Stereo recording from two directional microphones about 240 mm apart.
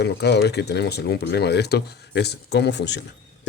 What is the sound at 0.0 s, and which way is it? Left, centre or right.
Speech, left.